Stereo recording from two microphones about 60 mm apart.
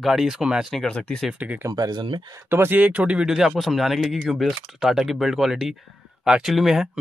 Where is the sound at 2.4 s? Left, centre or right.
Right.